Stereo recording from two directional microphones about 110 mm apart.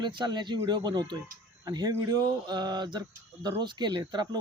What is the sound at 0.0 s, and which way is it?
Speech, 45° right (ahead or behind).